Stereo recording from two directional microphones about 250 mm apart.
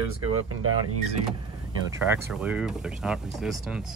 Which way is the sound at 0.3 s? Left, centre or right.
Right.